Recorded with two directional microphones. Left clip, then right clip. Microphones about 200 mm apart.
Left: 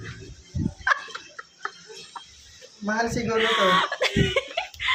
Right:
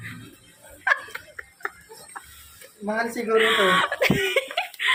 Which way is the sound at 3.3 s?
10° right (ahead or behind).